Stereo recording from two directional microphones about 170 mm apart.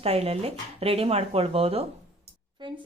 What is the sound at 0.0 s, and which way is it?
Speech, 35° right (ahead or behind).